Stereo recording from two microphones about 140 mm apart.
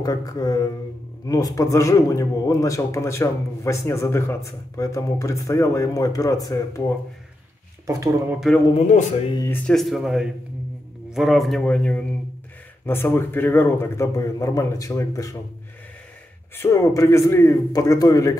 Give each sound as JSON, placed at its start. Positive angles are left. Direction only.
{"t": 0.0, "sound": "a man's voice", "side_deg": 25}
{"t": 7.8, "sound": "speech", "side_deg": -25}
{"t": 8.3, "sound": "speech", "side_deg": -5}
{"t": 8.7, "sound": "speech", "side_deg": 60}
{"t": 9.7, "sound": "a man's voice", "side_deg": 0}
{"t": 16.5, "sound": "a man's voice", "side_deg": 20}